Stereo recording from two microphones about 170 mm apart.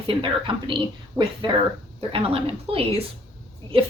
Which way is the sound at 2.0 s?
35° right (ahead or behind).